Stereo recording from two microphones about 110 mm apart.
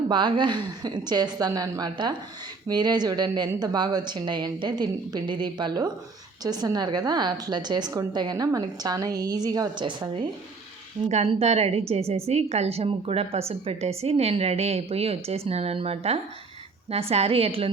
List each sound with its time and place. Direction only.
0.1 s a woman's voice: 45° right (ahead or behind)
11.1 s a woman's voice: 75° right (ahead or behind)